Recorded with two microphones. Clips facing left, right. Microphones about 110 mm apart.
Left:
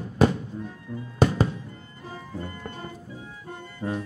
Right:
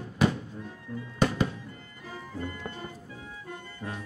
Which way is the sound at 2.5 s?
40° left (ahead or behind).